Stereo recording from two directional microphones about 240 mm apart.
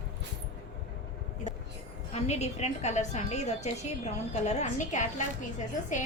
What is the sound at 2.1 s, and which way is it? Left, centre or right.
A woman's voice, left.